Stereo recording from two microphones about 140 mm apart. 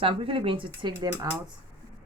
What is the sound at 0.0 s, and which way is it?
Speech, 40° right (ahead or behind).